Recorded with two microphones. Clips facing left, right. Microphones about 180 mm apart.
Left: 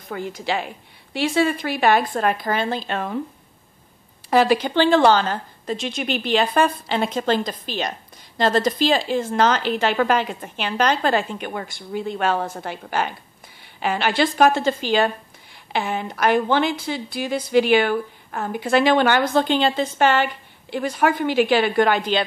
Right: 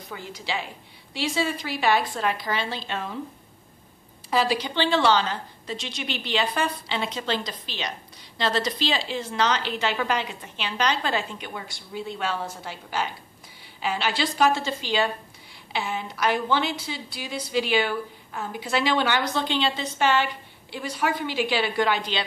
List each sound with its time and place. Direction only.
0.1 s a woman's voice: 55° left (ahead or behind)
4.3 s a woman's voice: 55° left (ahead or behind)